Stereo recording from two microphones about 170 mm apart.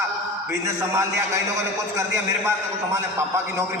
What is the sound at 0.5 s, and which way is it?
A man's voice, 15° right (ahead or behind).